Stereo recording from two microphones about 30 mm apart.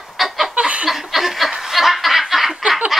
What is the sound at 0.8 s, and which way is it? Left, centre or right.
Chuckle, centre.